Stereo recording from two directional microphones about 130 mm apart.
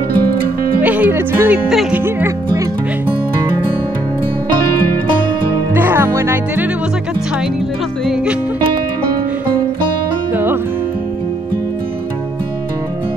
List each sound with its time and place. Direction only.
0.8 s music: 10° right (ahead or behind)
1.7 s speech: 5° right (ahead or behind)
2.0 s speech: 20° right (ahead or behind)
5.8 s music: 15° right (ahead or behind)
10.3 s music: 15° right (ahead or behind)